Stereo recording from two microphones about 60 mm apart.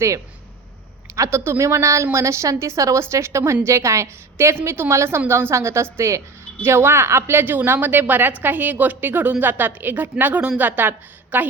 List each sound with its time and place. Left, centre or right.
1.1 s a woman's voice: right
4.5 s a woman's voice: right